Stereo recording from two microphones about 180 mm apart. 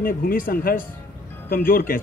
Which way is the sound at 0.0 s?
55° left (ahead or behind).